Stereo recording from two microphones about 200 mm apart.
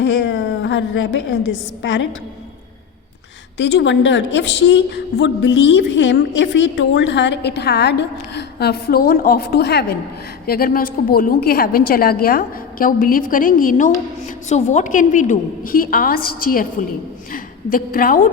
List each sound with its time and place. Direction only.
0.0 s a woman's voice: 60° left (ahead or behind)
3.6 s a woman's voice: 65° left (ahead or behind); by 18.3 s 45° left (ahead or behind)